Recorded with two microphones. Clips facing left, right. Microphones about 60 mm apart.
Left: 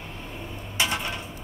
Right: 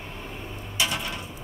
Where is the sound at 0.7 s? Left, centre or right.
Left.